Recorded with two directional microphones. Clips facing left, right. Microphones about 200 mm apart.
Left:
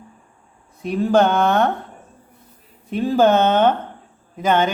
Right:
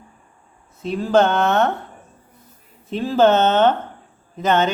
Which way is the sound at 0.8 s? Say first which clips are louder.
Even; 15° left (ahead or behind).